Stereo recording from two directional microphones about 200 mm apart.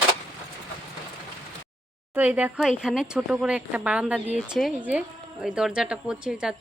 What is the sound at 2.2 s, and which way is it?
Speech, 10° right (ahead or behind).